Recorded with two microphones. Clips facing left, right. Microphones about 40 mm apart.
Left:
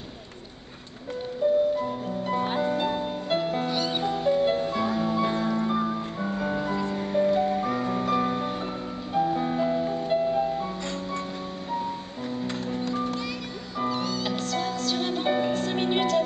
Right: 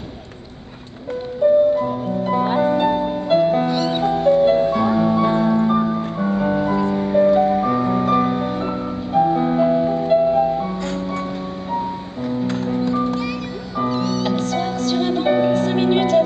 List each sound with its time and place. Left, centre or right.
1.4 s harp: centre
3.7 s music: centre
4.0 s music: centre
12.6 s music: centre
13.7 s music: centre